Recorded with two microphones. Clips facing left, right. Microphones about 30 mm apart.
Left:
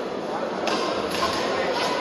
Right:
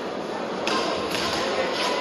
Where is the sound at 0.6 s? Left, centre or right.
Centre.